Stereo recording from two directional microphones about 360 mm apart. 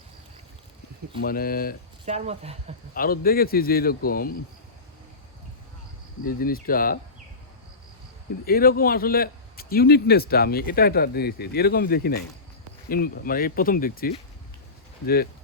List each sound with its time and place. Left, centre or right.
1.2 s speech: left
2.0 s speech: centre
2.9 s speech: left
6.2 s speech: left
8.4 s speech: left